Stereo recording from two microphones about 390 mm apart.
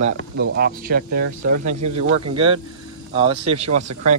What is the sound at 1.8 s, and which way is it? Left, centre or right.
Speech, right.